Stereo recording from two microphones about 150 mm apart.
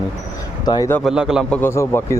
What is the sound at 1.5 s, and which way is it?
Speech, 15° left (ahead or behind).